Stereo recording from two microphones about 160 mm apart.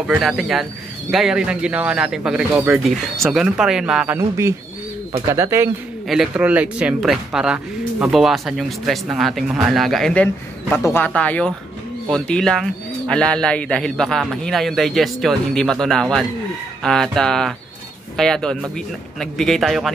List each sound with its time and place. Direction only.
0.0 s speech: 5° right (ahead or behind)
5.3 s speech: 15° right (ahead or behind)
6.0 s speech: 5° right (ahead or behind)